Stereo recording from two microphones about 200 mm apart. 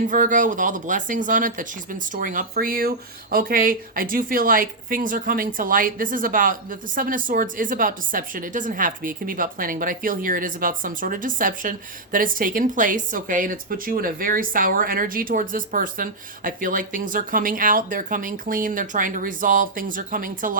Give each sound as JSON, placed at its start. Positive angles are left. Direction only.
{"t": 0.1, "sound": "speech", "side_deg": -40}